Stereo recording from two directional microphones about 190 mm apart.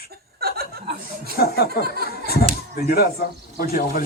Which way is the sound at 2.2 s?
55° left (ahead or behind).